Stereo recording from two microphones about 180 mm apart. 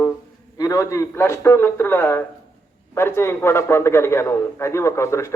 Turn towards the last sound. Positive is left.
turn(degrees=15)  # may be behind; listen again after turning